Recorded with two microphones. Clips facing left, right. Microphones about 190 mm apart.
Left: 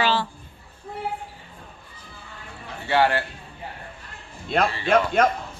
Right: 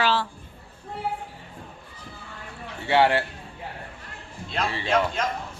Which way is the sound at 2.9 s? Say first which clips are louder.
Right 1 dB; 25° right (ahead or behind).